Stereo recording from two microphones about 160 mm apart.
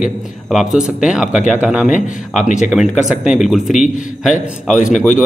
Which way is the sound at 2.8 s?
Centre (ahead or behind).